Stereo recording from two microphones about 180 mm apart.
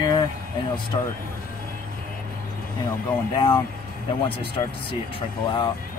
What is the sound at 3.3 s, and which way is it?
Speech, 25° left (ahead or behind).